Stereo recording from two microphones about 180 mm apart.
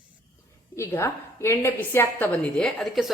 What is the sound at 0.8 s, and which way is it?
A woman's voice, 15° left (ahead or behind).